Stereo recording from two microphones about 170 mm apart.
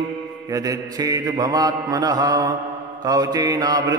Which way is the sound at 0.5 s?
20° right (ahead or behind).